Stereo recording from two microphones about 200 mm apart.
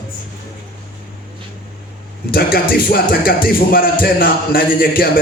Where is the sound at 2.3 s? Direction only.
50° left (ahead or behind).